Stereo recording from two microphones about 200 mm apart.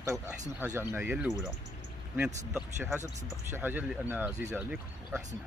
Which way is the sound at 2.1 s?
5° right (ahead or behind).